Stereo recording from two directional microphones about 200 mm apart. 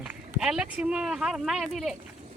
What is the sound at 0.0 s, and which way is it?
Speech, 5° right (ahead or behind).